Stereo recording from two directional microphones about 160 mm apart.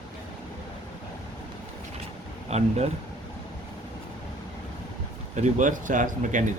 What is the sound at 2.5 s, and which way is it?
Speech, 45° right (ahead or behind).